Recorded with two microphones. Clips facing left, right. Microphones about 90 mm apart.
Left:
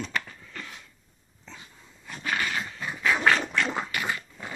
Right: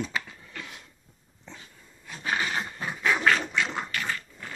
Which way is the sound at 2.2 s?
25° right (ahead or behind).